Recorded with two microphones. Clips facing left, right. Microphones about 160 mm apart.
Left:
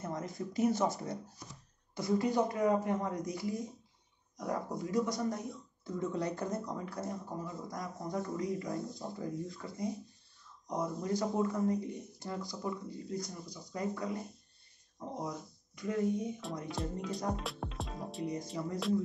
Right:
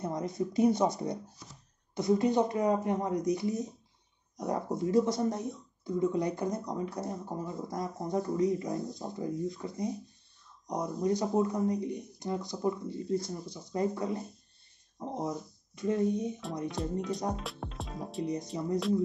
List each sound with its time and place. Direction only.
0.0 s speech: 20° right (ahead or behind)
16.8 s speech: centre (ahead or behind)
18.2 s speech: 20° right (ahead or behind)